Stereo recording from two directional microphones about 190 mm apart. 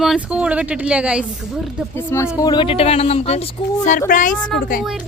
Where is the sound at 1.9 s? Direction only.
10° left (ahead or behind).